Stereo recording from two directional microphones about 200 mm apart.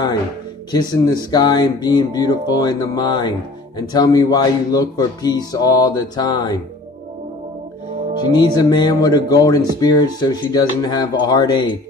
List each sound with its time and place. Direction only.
0.7 s music: 20° left (ahead or behind)
8.3 s music: 20° left (ahead or behind)